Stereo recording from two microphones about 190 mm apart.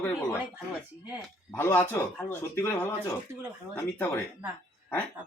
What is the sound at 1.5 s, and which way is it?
Speech, 10° left (ahead or behind).